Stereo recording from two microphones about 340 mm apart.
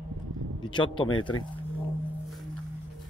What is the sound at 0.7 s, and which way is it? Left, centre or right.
Speech, centre.